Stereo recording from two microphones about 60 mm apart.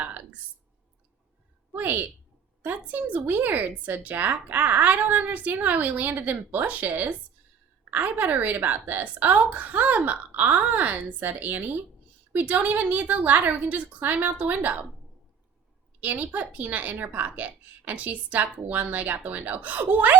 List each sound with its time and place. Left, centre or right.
0.0 s clicking: right
1.7 s a woman's voice: right
16.0 s a woman's voice: right